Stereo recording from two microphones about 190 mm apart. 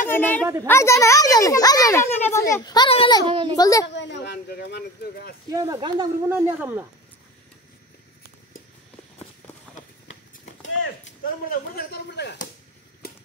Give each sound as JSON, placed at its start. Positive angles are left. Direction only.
{"t": 0.1, "sound": "a woman's voice", "side_deg": 10}
{"t": 3.3, "sound": "speech", "side_deg": -25}
{"t": 3.5, "sound": "a woman's voice", "side_deg": 20}
{"t": 3.8, "sound": "speech", "side_deg": 65}
{"t": 5.5, "sound": "speech", "side_deg": -20}
{"t": 6.2, "sound": "speech", "side_deg": -10}
{"t": 11.4, "sound": "speech", "side_deg": 55}